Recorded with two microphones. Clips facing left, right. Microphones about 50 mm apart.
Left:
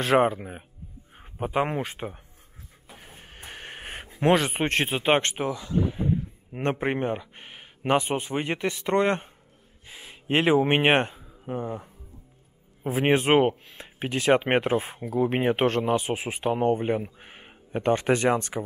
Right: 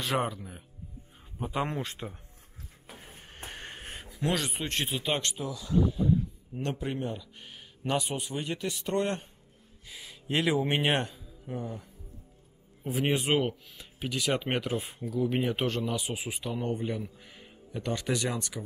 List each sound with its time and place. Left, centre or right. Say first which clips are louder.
0.0 s speech: left 9 dB; left
1.1 s a sound: left 6 dB; left
1.5 s speech: left 6 dB; left
3.0 s music: left 1 dB; centre
3.7 s speech: left 5 dB; left